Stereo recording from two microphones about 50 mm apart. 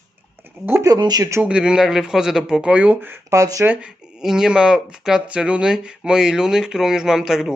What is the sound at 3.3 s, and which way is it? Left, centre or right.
Speech, right.